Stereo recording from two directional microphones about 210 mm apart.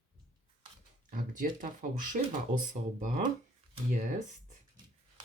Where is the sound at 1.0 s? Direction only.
40° right (ahead or behind).